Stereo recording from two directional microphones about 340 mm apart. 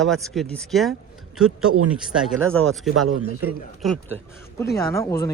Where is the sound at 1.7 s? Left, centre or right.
Right.